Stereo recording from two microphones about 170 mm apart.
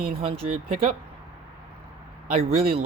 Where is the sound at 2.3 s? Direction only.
35° right (ahead or behind).